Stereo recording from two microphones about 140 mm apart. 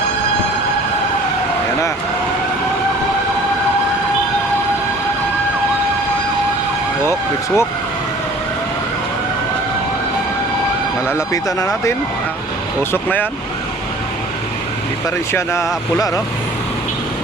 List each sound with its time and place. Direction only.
7.0 s vehicle: 20° left (ahead or behind)
11.1 s speech: 25° left (ahead or behind)
12.9 s speech: 15° left (ahead or behind)
15.3 s speech: 20° left (ahead or behind)